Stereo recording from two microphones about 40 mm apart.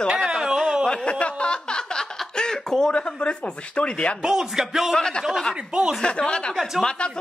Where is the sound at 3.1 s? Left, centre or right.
Left.